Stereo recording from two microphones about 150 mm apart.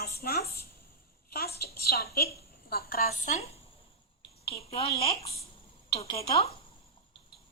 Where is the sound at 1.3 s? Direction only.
90° left; by 6.5 s 40° left (ahead or behind).